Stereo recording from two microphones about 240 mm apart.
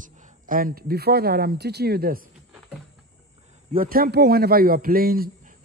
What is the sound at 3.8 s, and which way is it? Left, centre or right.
Speech, right.